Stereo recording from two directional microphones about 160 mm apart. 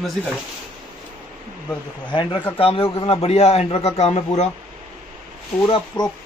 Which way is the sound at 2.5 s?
35° left (ahead or behind).